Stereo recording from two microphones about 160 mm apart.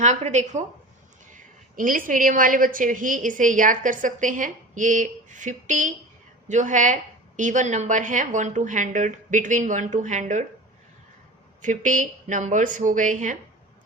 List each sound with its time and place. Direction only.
0.0 s a woman's voice: 45° right (ahead or behind)
11.6 s a woman's voice: 55° right (ahead or behind)